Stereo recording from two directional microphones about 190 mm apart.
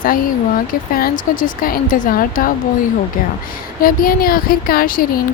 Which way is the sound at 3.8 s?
50° left (ahead or behind).